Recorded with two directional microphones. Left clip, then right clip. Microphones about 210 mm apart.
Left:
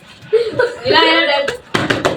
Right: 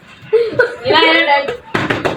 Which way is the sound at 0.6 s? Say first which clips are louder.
Even; 20° left (ahead or behind).